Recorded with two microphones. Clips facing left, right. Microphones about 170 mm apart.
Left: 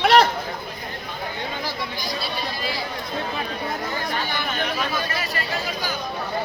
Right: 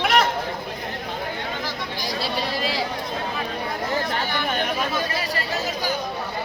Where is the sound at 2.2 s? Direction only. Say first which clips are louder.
Right 7 dB; 90° right.